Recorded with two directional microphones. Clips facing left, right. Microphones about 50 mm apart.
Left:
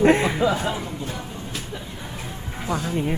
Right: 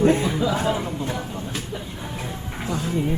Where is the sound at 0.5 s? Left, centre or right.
Right.